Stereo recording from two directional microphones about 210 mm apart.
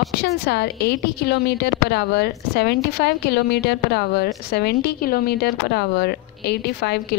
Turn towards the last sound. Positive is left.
turn(degrees=50)  # may be behind; listen again after turning